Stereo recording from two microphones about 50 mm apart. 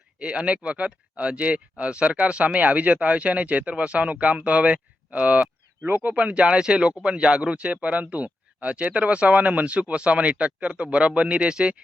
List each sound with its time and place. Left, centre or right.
0.2 s speech: right